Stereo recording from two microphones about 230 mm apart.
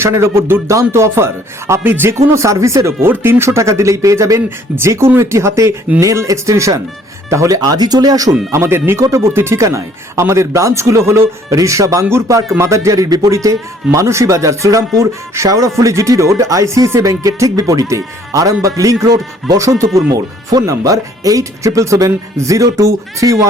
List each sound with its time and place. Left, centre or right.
0.0 s speech: centre